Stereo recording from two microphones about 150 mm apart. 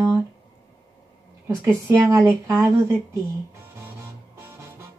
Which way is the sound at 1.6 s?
20° right (ahead or behind).